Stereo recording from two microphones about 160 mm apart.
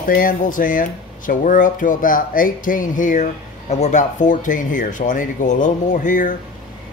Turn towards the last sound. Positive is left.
turn(degrees=55)  # may be behind; listen again after turning